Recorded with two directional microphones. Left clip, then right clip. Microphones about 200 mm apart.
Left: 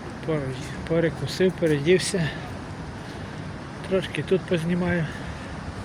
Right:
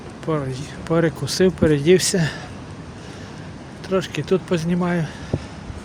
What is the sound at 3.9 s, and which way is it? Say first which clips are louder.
Speech: right 3 dB; 35° right (ahead or behind).